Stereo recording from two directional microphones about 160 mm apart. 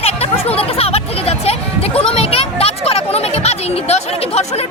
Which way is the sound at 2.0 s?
40° left (ahead or behind).